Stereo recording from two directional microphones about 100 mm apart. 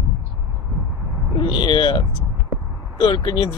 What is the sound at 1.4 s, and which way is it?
Speech, 55° left (ahead or behind).